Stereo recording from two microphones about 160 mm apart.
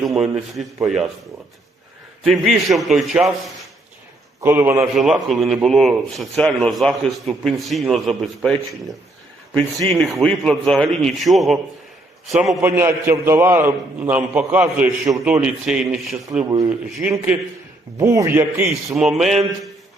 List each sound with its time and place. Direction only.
0.0 s speech: centre (ahead or behind)
2.2 s speech: 5° right (ahead or behind)
4.4 s a man's voice: 15° right (ahead or behind)
4.9 s speech: centre (ahead or behind)
12.6 s a man's voice: 15° right (ahead or behind)